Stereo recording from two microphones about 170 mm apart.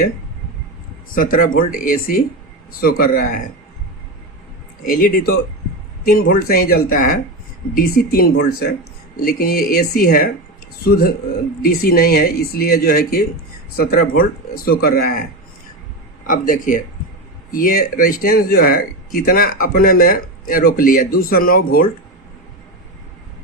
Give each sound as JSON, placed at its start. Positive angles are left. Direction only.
{"t": 1.1, "sound": "a man's voice", "side_deg": 55}
{"t": 4.9, "sound": "a man's voice", "side_deg": 55}
{"t": 16.2, "sound": "a man's voice", "side_deg": 55}